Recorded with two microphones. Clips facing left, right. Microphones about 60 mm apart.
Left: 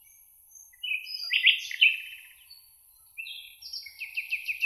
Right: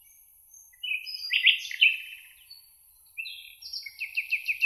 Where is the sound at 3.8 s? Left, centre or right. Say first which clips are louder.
Right 3 dB; right.